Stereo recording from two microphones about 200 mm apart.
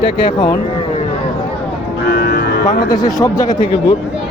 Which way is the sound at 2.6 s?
20° left (ahead or behind).